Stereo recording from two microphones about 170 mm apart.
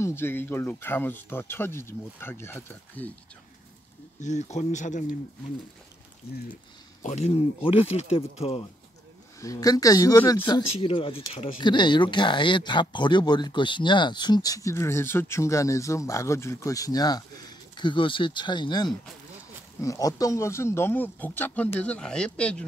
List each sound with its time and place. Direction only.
0.0 s speech: 15° left (ahead or behind)
4.2 s speech: 45° left (ahead or behind)
7.0 s speech: 40° left (ahead or behind)
9.4 s speech: 20° left (ahead or behind)